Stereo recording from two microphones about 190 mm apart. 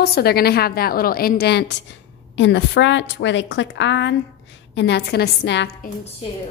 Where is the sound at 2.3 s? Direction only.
70° left (ahead or behind).